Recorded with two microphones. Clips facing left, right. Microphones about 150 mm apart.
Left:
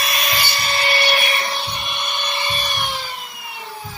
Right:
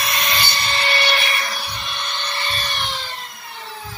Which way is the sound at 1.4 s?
25° left (ahead or behind).